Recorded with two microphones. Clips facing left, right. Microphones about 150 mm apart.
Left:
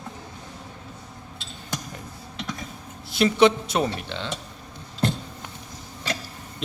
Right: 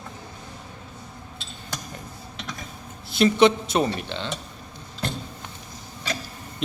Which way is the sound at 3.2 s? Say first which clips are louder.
Right 1 dB; 5° left (ahead or behind).